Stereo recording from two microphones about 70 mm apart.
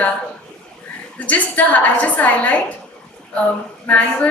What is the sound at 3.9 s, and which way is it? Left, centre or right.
Speech, left.